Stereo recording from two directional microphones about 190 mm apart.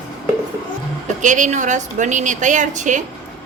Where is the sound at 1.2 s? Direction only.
40° right (ahead or behind).